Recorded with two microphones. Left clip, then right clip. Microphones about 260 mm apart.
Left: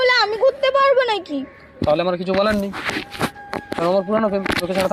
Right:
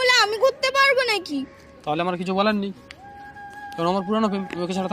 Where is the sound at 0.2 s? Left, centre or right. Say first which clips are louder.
Left 2 dB; right.